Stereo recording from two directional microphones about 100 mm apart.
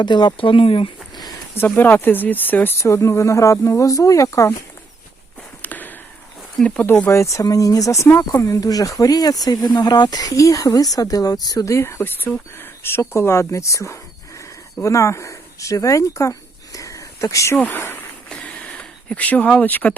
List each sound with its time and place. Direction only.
0.0 s speech: 50° left (ahead or behind)
1.5 s speech: 20° left (ahead or behind)
5.6 s a sound: 20° left (ahead or behind)
6.6 s speech: 10° left (ahead or behind)
6.8 s speech: 20° left (ahead or behind)
11.9 s speech: 20° left (ahead or behind)
18.3 s a sound: 10° left (ahead or behind)